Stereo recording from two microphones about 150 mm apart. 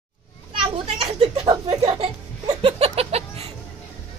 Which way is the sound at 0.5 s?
40° right (ahead or behind).